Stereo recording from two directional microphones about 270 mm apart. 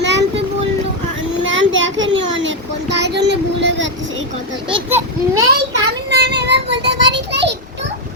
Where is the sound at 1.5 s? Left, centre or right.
Right.